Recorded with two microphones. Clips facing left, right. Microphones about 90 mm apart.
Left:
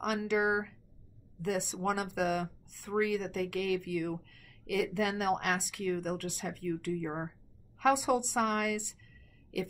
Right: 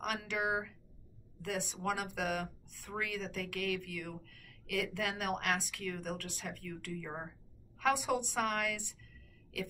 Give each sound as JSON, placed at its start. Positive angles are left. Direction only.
{"t": 0.0, "sound": "a woman's voice", "side_deg": 20}